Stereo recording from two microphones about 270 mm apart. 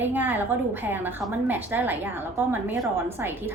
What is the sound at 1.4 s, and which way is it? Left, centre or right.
A woman's voice, centre.